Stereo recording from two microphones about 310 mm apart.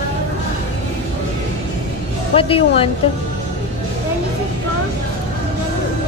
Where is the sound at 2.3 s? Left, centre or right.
Centre.